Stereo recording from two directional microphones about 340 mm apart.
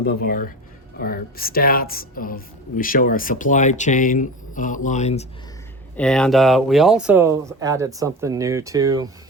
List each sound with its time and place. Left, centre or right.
0.0 s a woman's voice: left
6.0 s speech: centre